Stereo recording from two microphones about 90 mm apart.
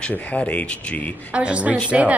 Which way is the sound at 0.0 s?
15° left (ahead or behind).